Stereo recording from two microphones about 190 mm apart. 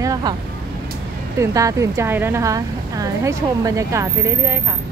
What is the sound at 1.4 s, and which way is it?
A woman's voice, 15° right (ahead or behind).